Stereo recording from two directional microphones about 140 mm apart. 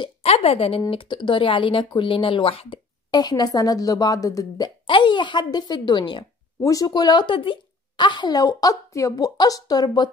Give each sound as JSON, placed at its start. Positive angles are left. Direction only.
{"t": 0.2, "sound": "speech", "side_deg": 45}
{"t": 3.1, "sound": "speech", "side_deg": 30}